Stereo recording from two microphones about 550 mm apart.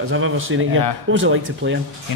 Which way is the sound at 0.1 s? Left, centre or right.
Right.